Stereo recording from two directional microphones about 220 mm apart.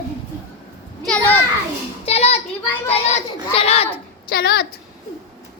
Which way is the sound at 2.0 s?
30° left (ahead or behind).